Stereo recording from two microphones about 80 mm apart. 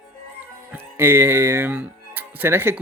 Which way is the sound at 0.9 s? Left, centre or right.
Right.